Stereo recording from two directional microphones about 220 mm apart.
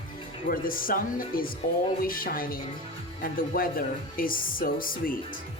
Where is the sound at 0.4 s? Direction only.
40° left (ahead or behind).